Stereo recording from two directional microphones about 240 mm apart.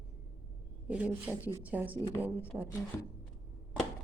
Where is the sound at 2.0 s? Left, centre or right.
Centre.